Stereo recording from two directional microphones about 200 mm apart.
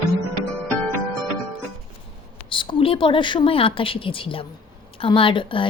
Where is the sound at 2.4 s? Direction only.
25° left (ahead or behind).